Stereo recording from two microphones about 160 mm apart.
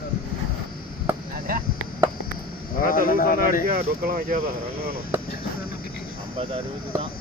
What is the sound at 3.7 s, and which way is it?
Speech, 70° right (ahead or behind).